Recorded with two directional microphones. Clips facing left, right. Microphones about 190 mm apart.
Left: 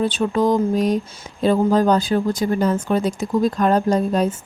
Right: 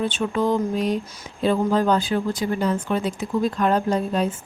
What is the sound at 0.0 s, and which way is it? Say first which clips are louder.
Speech: left 4 dB; 35° left (ahead or behind).